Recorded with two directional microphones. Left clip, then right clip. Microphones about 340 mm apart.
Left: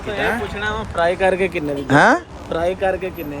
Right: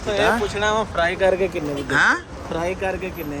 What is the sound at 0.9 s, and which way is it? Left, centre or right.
Speech, centre.